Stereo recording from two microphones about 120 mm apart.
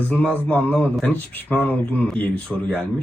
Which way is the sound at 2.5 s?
Centre (ahead or behind).